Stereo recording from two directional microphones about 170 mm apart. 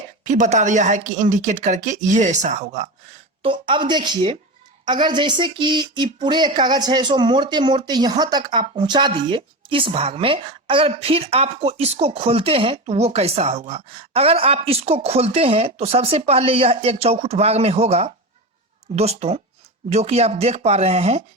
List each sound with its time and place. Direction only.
0.3 s speech: 45° right (ahead or behind)
3.4 s a woman's voice: 30° right (ahead or behind)